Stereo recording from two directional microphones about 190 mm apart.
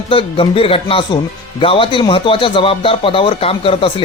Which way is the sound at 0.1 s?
30° left (ahead or behind).